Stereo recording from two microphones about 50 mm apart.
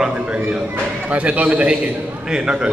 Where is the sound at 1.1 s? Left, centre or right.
Right.